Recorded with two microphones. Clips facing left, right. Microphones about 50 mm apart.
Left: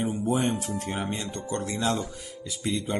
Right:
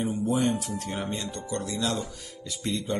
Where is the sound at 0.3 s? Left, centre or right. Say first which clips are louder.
Even; left.